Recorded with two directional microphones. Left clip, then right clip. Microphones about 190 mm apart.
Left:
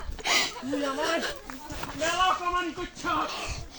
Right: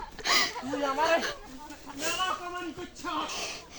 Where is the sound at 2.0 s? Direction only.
35° right (ahead or behind).